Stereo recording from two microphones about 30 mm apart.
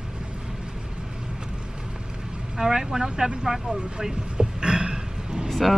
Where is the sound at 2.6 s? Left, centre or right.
Centre.